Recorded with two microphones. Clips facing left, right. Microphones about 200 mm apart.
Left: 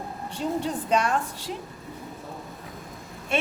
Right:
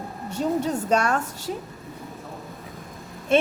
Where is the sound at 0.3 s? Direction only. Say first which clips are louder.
Right 4 dB; 45° right (ahead or behind).